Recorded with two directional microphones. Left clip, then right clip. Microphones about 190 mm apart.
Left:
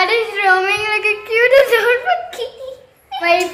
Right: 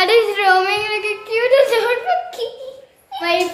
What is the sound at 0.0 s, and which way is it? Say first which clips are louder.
Yodeling: right 1 dB; 45° right (ahead or behind).